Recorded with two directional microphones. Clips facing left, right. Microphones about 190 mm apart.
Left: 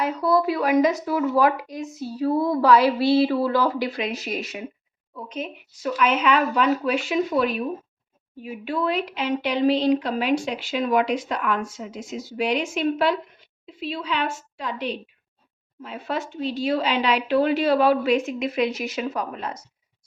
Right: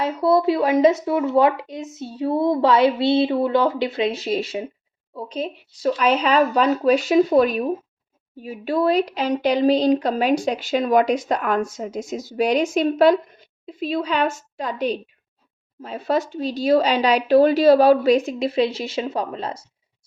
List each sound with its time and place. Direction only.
0.0 s speech: 25° right (ahead or behind)